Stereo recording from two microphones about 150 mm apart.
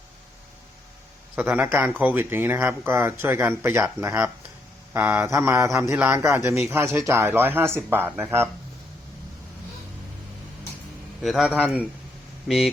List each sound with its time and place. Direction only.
1.4 s speech: 15° right (ahead or behind)
11.2 s a man's voice: centre (ahead or behind)